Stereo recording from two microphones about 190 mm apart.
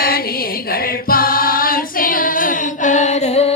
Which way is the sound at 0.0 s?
50° left (ahead or behind).